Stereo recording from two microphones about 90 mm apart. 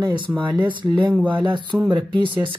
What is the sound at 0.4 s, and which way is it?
Speech, 60° right (ahead or behind).